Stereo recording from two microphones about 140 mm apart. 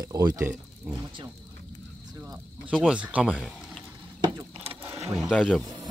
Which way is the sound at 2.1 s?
25° right (ahead or behind).